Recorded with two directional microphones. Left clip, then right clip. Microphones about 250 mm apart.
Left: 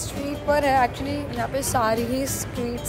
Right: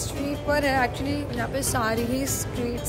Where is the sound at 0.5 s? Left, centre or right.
Centre.